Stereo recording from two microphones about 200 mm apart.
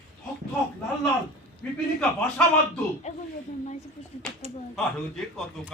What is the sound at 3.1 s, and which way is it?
Speech, 35° left (ahead or behind).